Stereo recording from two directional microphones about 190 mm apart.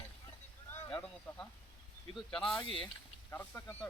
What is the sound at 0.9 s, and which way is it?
A man's voice, 5° left (ahead or behind).